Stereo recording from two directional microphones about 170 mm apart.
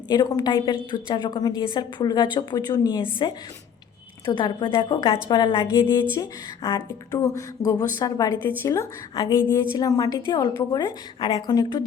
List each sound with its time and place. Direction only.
0.1 s speech: 20° left (ahead or behind)
4.3 s speech: 25° left (ahead or behind)
5.6 s a woman's voice: 15° left (ahead or behind)